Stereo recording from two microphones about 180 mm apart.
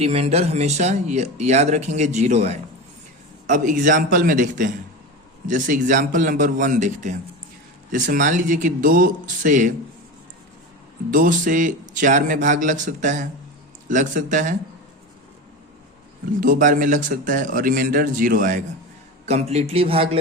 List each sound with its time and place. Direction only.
0.0 s a man's voice: 35° right (ahead or behind)
11.1 s a man's voice: 50° right (ahead or behind)
16.4 s a man's voice: 50° right (ahead or behind)
19.2 s speech: 35° right (ahead or behind)